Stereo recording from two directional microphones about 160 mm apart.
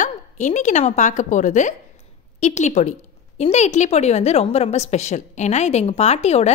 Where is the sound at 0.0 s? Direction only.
50° left (ahead or behind).